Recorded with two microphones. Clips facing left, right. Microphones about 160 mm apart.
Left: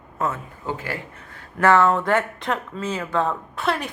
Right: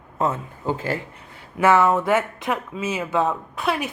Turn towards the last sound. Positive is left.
turn(degrees=-5)  # may be behind; listen again after turning